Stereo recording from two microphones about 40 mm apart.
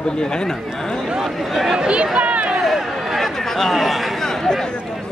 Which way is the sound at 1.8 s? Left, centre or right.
Right.